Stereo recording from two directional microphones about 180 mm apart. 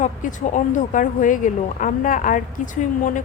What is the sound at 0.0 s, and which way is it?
A woman's voice, 45° left (ahead or behind).